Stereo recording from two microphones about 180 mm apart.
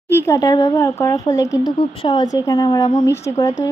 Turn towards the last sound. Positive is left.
turn(degrees=15)  # may be behind; listen again after turning